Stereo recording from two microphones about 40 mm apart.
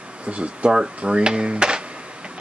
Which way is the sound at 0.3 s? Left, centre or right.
Right.